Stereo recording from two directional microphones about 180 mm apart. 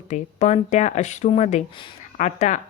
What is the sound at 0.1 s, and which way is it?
A woman's voice, 40° left (ahead or behind).